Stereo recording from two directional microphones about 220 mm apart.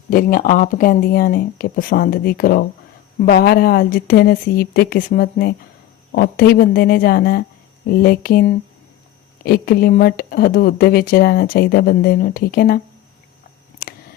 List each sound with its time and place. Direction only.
0.1 s speech: 40° left (ahead or behind)